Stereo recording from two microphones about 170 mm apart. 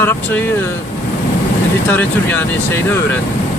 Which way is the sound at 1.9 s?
10° left (ahead or behind).